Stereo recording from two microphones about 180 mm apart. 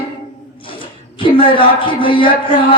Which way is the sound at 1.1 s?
30° left (ahead or behind).